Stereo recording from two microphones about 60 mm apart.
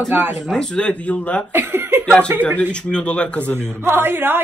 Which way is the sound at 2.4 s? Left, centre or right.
Centre.